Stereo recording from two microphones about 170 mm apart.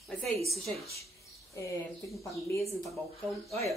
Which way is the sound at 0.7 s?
35° right (ahead or behind).